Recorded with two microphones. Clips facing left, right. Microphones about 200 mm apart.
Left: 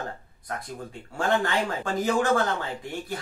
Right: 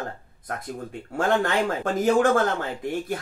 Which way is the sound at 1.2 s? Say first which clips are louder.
Right 3 dB; 50° right (ahead or behind).